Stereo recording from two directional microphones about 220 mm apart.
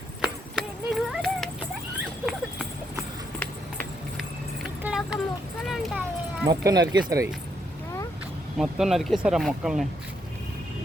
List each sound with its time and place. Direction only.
0.2 s a sound: centre (ahead or behind)
2.2 s clip-clop: 5° right (ahead or behind)
3.4 s music: 5° left (ahead or behind)
4.8 s vehicle: 5° right (ahead or behind)
6.5 s speech: 15° right (ahead or behind)
8.5 s speech: centre (ahead or behind)